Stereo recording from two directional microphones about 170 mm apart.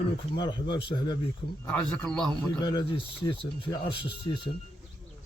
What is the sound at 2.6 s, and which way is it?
A man's voice, 25° left (ahead or behind).